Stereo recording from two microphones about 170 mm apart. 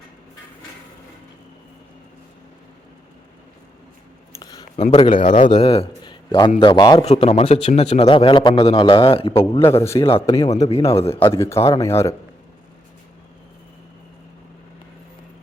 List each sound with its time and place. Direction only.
4.3 s a sound: 20° left (ahead or behind)
4.8 s a man's voice: 45° left (ahead or behind)
5.5 s a man's voice: 35° left (ahead or behind)
7.0 s a man's voice: 35° left (ahead or behind)
11.3 s speech: 15° left (ahead or behind)